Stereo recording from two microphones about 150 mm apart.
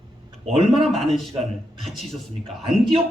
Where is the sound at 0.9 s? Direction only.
Centre (ahead or behind).